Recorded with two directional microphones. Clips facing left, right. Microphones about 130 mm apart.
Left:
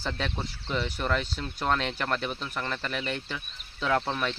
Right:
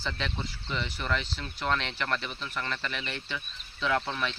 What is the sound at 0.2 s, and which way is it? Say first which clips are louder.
Speech: left 2 dB; 45° left (ahead or behind).